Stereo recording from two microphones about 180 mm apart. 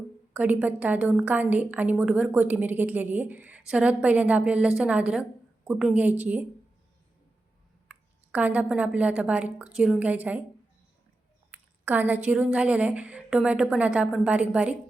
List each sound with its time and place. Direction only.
0.3 s a woman's voice: 10° right (ahead or behind)
7.9 s a woman's voice: 10° right (ahead or behind)
11.5 s a woman's voice: 10° right (ahead or behind)